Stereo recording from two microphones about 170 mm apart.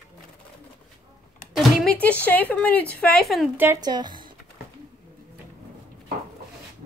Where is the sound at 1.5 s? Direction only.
Centre (ahead or behind).